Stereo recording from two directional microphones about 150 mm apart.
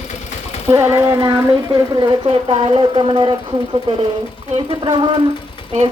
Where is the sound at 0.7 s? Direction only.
20° right (ahead or behind).